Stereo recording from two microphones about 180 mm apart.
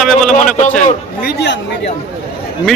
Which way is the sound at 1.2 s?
70° left (ahead or behind).